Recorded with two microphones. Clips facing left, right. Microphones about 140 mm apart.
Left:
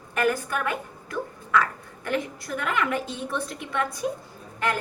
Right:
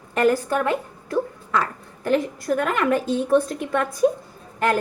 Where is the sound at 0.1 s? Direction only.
30° right (ahead or behind).